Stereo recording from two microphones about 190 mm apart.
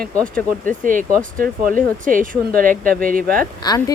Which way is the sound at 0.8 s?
45° right (ahead or behind).